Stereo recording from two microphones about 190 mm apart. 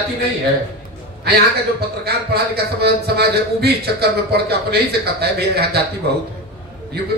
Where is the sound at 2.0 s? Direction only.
55° right (ahead or behind).